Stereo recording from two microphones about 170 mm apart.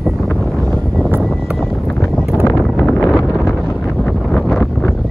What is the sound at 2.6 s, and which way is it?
Wind noise, 5° left (ahead or behind).